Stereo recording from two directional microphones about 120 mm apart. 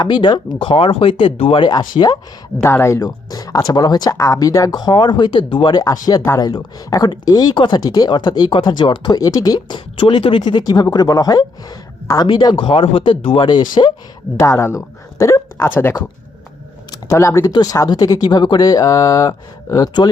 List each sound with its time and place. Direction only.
0.0 s speech: 40° left (ahead or behind)
2.6 s speech: 20° left (ahead or behind); by 13.9 s 35° left (ahead or behind)
14.4 s speech: 25° left (ahead or behind)